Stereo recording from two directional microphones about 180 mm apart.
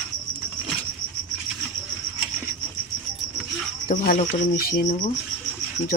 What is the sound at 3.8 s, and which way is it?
Speech, 55° left (ahead or behind).